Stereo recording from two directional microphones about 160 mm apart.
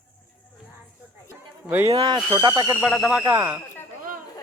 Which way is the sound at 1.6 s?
15° right (ahead or behind).